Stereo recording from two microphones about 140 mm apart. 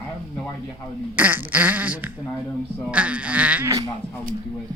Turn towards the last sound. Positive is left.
turn(degrees=-10)  # may be behind; listen again after turning